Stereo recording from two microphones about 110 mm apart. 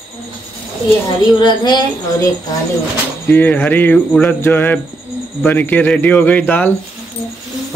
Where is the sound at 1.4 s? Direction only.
45° left (ahead or behind).